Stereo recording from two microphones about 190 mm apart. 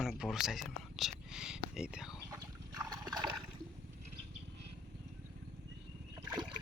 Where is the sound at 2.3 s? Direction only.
20° right (ahead or behind).